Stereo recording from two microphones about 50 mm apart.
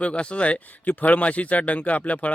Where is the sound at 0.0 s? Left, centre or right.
Left.